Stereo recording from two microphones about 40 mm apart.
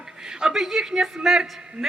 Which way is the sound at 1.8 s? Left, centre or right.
Right.